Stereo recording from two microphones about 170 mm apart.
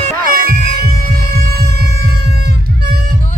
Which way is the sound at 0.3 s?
60° right (ahead or behind).